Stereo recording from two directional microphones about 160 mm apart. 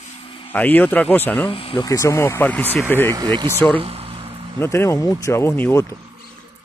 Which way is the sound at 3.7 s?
35° right (ahead or behind).